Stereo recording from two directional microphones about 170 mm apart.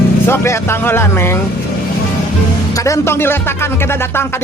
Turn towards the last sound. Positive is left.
turn(degrees=15)  # may be behind; listen again after turning